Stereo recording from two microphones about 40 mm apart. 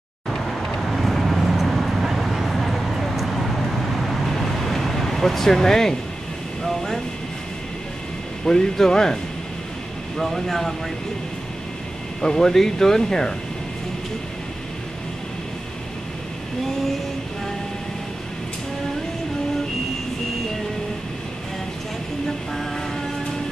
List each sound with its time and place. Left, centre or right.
0.3 s vehicle: centre
8.5 s speech: centre
12.2 s speech: centre